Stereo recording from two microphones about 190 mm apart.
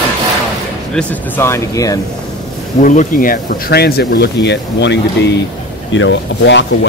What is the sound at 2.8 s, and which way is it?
Speech, 40° left (ahead or behind).